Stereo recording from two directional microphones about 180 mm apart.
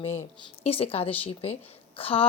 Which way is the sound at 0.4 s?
30° left (ahead or behind).